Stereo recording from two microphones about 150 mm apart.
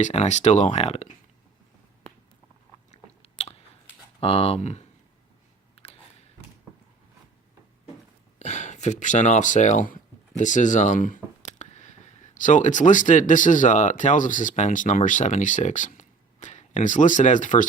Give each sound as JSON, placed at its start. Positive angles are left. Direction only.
{"t": 0.0, "sound": "speech", "side_deg": 45}
{"t": 2.9, "sound": "biting", "side_deg": 45}
{"t": 4.2, "sound": "speech", "side_deg": 40}
{"t": 5.8, "sound": "a sound", "side_deg": 40}
{"t": 8.4, "sound": "speech", "side_deg": 50}